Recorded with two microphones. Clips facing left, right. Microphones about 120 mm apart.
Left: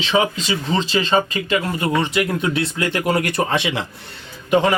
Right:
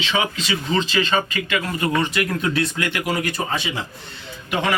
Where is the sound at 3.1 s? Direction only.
60° left (ahead or behind).